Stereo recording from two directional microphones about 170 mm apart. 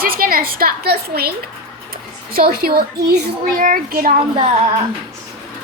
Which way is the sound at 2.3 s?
60° right (ahead or behind).